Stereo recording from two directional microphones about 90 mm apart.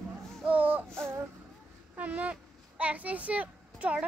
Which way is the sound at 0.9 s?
30° right (ahead or behind).